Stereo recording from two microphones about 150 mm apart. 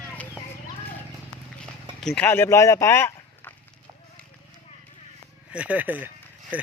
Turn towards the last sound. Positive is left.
turn(degrees=-10)  # may be behind; listen again after turning